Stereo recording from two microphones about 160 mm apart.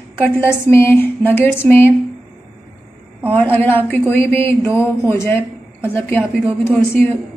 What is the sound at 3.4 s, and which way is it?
A woman's voice, 10° left (ahead or behind).